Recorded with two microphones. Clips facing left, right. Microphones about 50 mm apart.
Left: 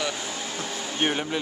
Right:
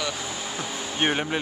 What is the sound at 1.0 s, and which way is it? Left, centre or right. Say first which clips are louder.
Speech: right 2 dB; centre.